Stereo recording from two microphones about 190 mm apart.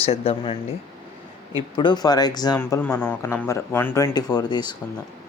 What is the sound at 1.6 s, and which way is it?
Speech, 25° left (ahead or behind).